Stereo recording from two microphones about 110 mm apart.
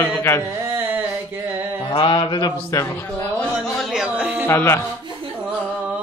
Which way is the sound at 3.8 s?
5° right (ahead or behind).